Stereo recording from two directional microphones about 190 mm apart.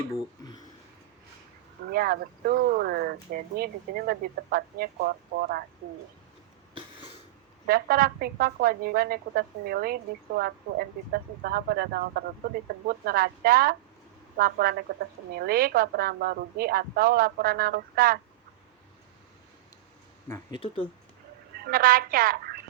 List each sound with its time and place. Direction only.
0.1 s speech: 20° left (ahead or behind)
1.9 s a woman's voice: 50° right (ahead or behind)
7.7 s a woman's voice: 50° right (ahead or behind)
20.2 s speech: 20° left (ahead or behind)
21.7 s a woman's voice: 50° right (ahead or behind)